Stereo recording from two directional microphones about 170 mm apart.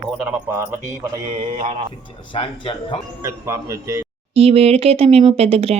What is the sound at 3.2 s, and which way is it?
Speech, 15° right (ahead or behind).